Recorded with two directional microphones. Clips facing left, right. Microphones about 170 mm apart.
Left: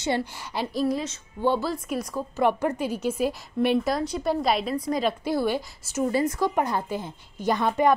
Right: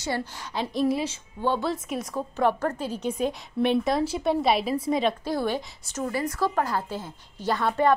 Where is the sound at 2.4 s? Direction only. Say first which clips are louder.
Left 2 dB; 10° left (ahead or behind).